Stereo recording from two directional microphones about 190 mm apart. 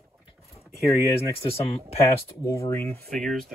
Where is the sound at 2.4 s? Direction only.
15° left (ahead or behind).